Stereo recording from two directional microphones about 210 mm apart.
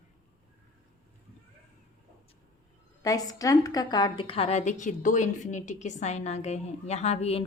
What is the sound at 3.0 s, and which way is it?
A woman's voice, 15° left (ahead or behind).